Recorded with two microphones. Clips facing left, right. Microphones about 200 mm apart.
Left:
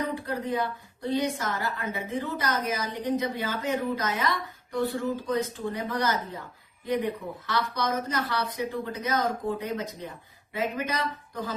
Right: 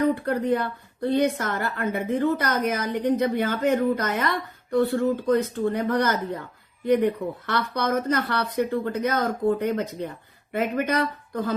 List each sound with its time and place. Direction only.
0.1 s a woman's voice: 60° right (ahead or behind)